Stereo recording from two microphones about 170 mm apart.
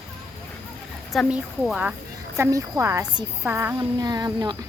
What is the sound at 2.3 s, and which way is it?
Speech, 15° right (ahead or behind).